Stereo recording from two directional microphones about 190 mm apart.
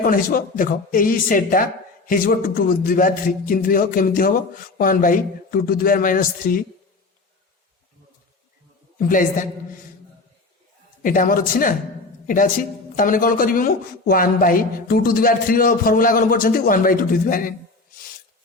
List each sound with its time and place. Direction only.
0.0 s speech: 45° left (ahead or behind)
9.0 s speech: 45° left (ahead or behind)
11.0 s speech: 45° left (ahead or behind)